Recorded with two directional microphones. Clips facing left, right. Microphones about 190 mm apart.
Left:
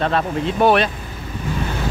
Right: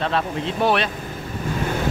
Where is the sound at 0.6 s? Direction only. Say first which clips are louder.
Left 5 dB; 55° left (ahead or behind).